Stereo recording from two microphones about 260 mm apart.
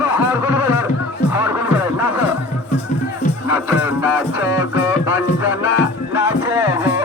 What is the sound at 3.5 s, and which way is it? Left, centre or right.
Music, centre.